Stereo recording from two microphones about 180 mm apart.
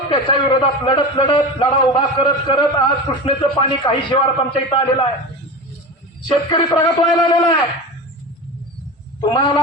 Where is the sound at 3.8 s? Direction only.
30° left (ahead or behind).